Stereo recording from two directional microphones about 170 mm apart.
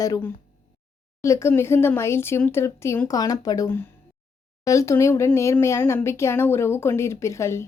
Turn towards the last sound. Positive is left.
turn(degrees=15)  # may be behind; listen again after turning